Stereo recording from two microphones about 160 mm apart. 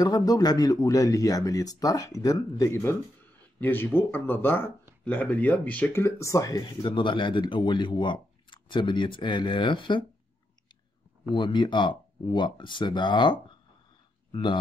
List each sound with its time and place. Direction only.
0.0 s speech: 25° left (ahead or behind)
11.3 s speech: 30° left (ahead or behind)